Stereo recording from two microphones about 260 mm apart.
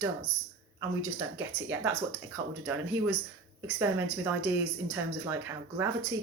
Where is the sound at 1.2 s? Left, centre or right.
Centre.